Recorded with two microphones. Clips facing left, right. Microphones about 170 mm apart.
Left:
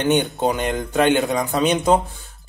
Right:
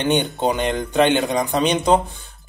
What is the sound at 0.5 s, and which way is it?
A man's voice, 5° left (ahead or behind).